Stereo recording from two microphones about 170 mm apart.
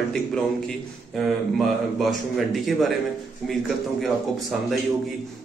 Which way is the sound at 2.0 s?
Centre (ahead or behind).